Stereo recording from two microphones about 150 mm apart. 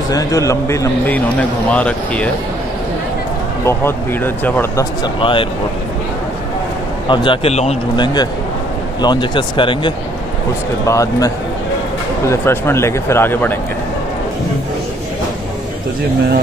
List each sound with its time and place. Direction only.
0.1 s a man's voice: 20° left (ahead or behind)
3.6 s speech: 15° left (ahead or behind)
5.0 s speech: 35° left (ahead or behind)
7.1 s a man's voice: 40° left (ahead or behind)
7.9 s a man's voice: 30° left (ahead or behind)
10.9 s a man's voice: 20° left (ahead or behind)